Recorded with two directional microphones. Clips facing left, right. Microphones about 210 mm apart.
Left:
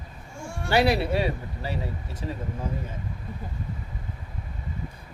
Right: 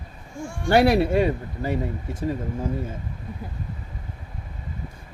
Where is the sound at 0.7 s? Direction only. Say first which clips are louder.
Right 5 dB; 55° right (ahead or behind).